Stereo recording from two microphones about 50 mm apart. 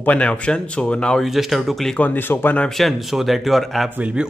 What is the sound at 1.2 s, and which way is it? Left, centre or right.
Speech, centre.